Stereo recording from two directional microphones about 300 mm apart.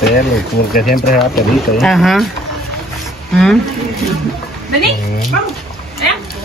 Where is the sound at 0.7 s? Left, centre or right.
Left.